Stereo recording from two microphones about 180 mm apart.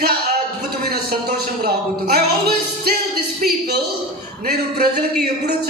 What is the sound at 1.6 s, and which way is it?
A man's voice, 60° right (ahead or behind).